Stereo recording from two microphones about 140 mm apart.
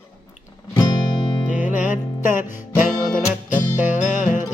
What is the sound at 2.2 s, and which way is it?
Music, 65° left (ahead or behind).